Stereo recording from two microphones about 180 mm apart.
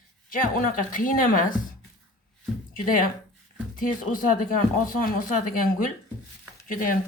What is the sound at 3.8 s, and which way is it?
Speech, 50° left (ahead or behind).